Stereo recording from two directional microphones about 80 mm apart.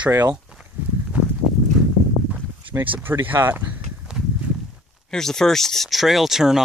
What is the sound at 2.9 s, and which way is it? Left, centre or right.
Speech, right.